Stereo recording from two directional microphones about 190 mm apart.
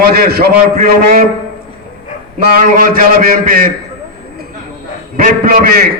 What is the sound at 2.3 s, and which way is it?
A man's voice, 45° right (ahead or behind).